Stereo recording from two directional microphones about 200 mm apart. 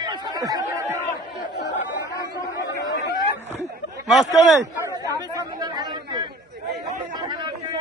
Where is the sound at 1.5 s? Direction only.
60° left (ahead or behind).